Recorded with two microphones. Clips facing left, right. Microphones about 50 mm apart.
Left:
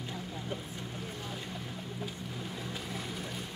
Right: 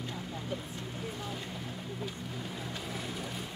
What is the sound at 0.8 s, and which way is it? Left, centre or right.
Boat, centre.